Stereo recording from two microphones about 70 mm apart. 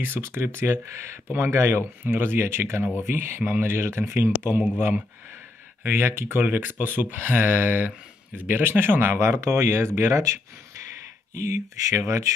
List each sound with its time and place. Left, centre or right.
0.0 s speech: right
11.7 s speech: right